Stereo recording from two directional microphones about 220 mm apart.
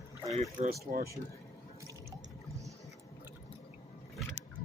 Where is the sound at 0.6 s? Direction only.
30° right (ahead or behind).